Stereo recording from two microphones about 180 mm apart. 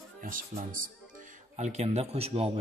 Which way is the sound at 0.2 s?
50° right (ahead or behind).